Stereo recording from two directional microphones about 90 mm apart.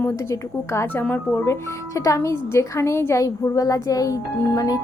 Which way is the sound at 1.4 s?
35° left (ahead or behind).